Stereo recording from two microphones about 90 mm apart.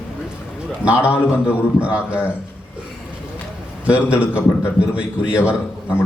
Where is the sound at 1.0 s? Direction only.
25° left (ahead or behind).